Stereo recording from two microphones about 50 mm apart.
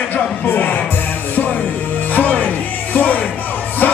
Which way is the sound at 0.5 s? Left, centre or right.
Left.